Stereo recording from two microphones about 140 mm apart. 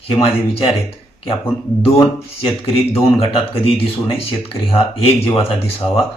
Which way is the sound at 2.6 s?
45° left (ahead or behind).